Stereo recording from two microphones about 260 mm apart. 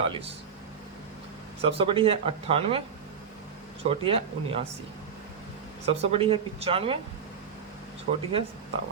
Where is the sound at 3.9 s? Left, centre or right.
Right.